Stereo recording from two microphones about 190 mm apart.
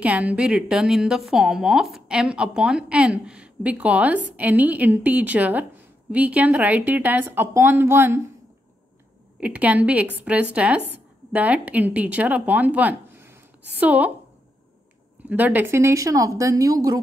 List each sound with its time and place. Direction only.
0.0 s a woman's voice: 5° right (ahead or behind)
9.4 s a woman's voice: 5° right (ahead or behind)
15.2 s a woman's voice: 10° right (ahead or behind)